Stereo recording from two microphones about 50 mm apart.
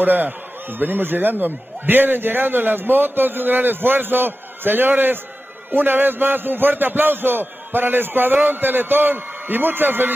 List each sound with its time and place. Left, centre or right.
0.0 s a man's voice: right